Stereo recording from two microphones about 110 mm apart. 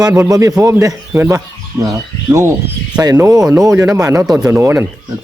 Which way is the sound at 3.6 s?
30° right (ahead or behind).